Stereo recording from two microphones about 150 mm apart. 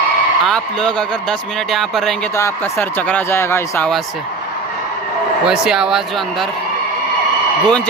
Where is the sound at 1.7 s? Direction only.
Centre (ahead or behind).